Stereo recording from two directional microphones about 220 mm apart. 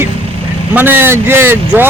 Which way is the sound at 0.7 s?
10° right (ahead or behind).